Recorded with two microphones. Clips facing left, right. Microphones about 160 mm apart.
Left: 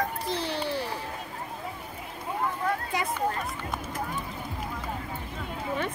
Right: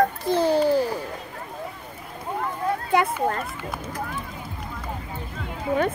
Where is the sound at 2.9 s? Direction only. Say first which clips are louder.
Right 10 dB; 60° right (ahead or behind).